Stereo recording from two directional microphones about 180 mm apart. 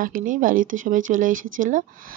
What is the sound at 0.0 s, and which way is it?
Speech, 50° right (ahead or behind).